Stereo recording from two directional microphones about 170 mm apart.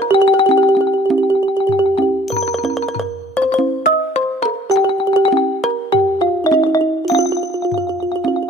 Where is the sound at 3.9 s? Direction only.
40° left (ahead or behind).